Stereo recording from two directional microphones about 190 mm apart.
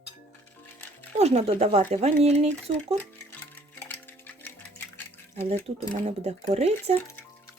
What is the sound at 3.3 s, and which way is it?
Music, 10° left (ahead or behind).